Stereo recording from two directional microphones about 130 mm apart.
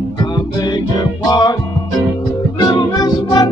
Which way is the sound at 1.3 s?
30° left (ahead or behind).